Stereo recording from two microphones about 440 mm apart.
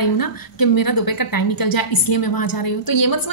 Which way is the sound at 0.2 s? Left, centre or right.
Left.